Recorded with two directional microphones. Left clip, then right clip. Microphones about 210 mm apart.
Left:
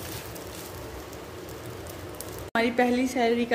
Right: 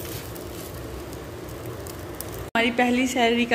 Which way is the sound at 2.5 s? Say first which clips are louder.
Right 2 dB; 10° left (ahead or behind).